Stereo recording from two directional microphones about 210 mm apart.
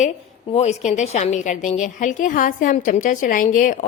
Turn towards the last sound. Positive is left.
turn(degrees=40)  # may be behind; listen again after turning